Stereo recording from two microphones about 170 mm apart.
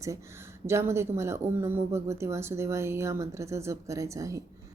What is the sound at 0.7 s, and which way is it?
A woman's voice, 15° right (ahead or behind).